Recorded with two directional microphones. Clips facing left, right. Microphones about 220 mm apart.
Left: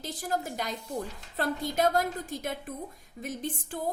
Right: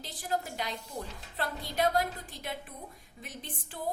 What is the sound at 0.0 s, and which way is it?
A woman's voice, 45° left (ahead or behind).